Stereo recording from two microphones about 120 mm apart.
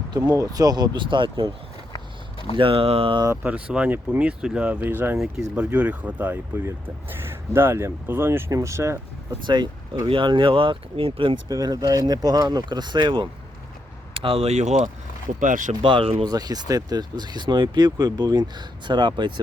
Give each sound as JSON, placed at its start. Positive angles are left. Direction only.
{"t": 0.1, "sound": "speech", "side_deg": -30}
{"t": 2.6, "sound": "speech", "side_deg": -50}
{"t": 3.4, "sound": "speech", "side_deg": -10}
{"t": 9.5, "sound": "speech", "side_deg": -40}
{"t": 11.4, "sound": "speech", "side_deg": -30}
{"t": 15.4, "sound": "speech", "side_deg": -90}
{"t": 15.8, "sound": "speech", "side_deg": -45}
{"t": 16.2, "sound": "speech", "side_deg": -35}